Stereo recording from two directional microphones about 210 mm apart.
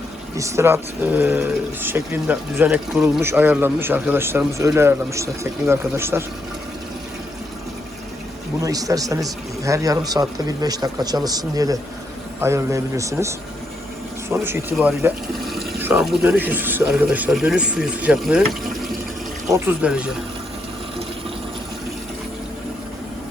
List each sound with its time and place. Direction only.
0.3 s speech: 15° right (ahead or behind)
8.6 s speech: 15° right (ahead or behind)